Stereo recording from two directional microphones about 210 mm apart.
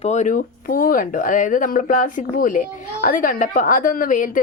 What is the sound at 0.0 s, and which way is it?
Speech, 35° left (ahead or behind).